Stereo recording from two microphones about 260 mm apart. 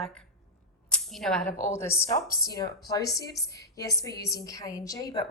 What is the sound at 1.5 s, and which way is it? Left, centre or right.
Speech, left.